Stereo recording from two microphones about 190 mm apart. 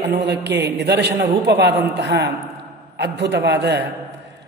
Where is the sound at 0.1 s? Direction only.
65° right (ahead or behind).